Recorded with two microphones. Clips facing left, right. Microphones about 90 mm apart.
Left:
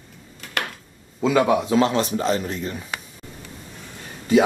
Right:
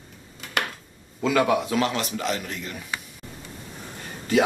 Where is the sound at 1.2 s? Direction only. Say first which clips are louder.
Left 3 dB; 25° left (ahead or behind).